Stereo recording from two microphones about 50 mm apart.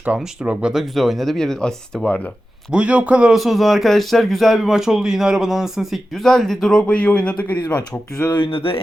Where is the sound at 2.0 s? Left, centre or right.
Left.